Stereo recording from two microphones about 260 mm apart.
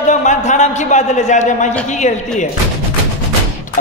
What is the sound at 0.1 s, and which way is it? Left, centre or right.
A man's voice, left.